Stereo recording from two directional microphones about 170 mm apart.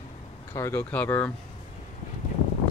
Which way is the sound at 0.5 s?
15° left (ahead or behind).